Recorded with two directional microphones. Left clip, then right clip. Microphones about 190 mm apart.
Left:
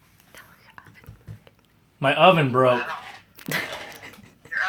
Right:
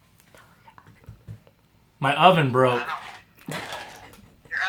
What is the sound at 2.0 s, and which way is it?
Speech, 10° right (ahead or behind).